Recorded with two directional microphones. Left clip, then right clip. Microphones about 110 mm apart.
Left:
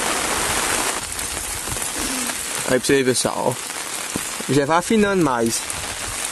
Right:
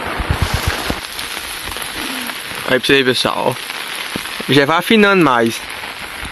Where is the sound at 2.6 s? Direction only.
Centre (ahead or behind).